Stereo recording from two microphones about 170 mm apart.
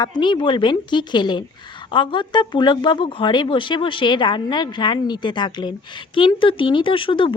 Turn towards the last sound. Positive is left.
turn(degrees=30)  # may be behind; listen again after turning